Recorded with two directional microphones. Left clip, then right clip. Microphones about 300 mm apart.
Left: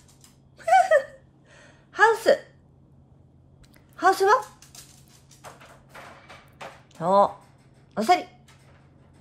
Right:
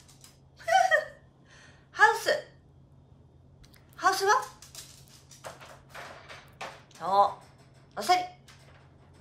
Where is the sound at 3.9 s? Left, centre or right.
Centre.